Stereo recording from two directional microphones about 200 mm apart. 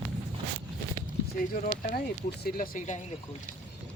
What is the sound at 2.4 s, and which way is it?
Speech, 45° left (ahead or behind).